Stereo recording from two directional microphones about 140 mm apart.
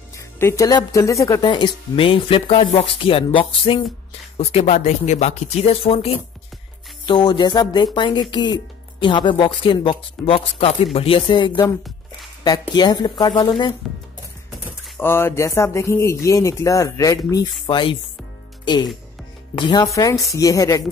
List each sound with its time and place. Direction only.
0.4 s speech: 20° left (ahead or behind)
1.5 s speech: 35° left (ahead or behind)
7.1 s speech: 30° left (ahead or behind)
12.7 s speech: 30° left (ahead or behind)
15.0 s speech: 15° left (ahead or behind); by 17.9 s 35° left (ahead or behind)
19.5 s speech: 30° left (ahead or behind)